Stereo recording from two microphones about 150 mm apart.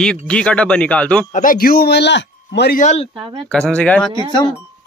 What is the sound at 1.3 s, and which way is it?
Speech, 65° left (ahead or behind).